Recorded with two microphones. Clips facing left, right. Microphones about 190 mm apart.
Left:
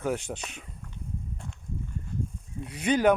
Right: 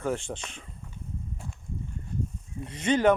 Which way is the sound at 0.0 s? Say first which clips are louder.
Even; 5° left (ahead or behind).